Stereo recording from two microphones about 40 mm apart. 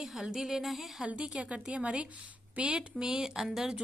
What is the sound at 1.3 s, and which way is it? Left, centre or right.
Speech, right.